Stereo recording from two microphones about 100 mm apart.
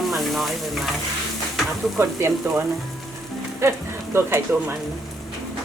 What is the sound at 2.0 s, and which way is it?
Speech, 25° right (ahead or behind).